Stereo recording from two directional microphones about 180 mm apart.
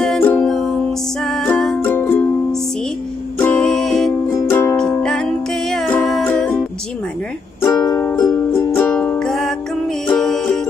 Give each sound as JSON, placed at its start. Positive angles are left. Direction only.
{"t": 0.0, "sound": "music", "side_deg": 5}
{"t": 3.3, "sound": "music", "side_deg": 5}
{"t": 4.3, "sound": "music", "side_deg": 15}
{"t": 5.0, "sound": "music", "side_deg": 5}
{"t": 7.6, "sound": "music", "side_deg": 15}